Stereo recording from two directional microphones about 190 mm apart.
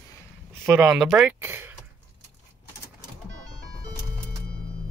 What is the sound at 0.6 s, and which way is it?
Speech, 5° right (ahead or behind).